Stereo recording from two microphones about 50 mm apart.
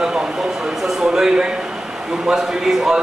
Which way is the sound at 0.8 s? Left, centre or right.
Centre.